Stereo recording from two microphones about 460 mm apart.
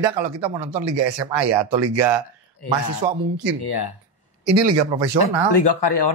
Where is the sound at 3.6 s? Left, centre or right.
Left.